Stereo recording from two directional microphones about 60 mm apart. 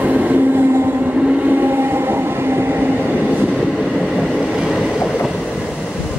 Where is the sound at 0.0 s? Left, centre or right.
Right.